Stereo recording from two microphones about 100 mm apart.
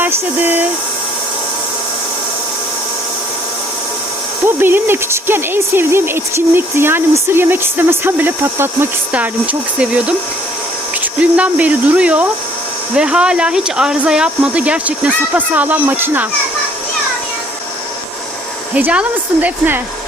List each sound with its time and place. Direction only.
0.0 s speech: 20° right (ahead or behind)
4.4 s speech: 20° right (ahead or behind)
11.2 s speech: 15° right (ahead or behind)
18.7 s speech: 10° right (ahead or behind)